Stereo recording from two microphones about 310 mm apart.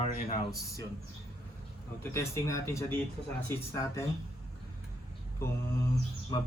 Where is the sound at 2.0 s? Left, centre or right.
Centre.